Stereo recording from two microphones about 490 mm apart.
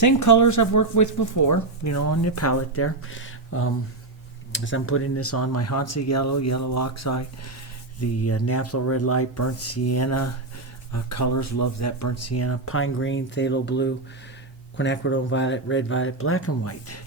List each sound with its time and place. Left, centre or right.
0.0 s speech: left